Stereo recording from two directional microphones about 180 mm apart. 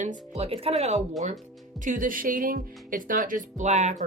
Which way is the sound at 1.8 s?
50° right (ahead or behind).